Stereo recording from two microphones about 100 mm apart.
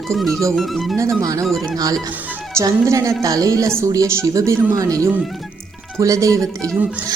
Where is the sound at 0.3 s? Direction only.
30° right (ahead or behind).